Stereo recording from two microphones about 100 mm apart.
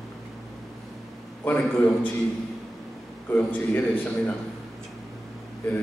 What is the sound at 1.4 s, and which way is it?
Speech, 20° left (ahead or behind).